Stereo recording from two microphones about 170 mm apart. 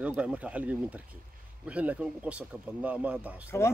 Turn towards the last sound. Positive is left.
turn(degrees=15)  # may be behind; listen again after turning